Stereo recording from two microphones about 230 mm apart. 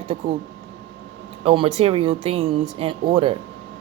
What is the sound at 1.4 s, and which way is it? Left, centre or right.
A woman's voice, right.